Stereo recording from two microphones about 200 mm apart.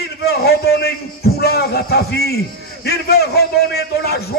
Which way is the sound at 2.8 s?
50° left (ahead or behind).